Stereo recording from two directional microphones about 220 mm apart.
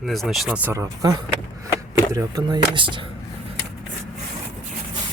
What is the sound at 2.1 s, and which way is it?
Speech, 20° right (ahead or behind).